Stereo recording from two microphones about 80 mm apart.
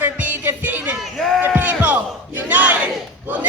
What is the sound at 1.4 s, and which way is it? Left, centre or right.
A woman's voice, right.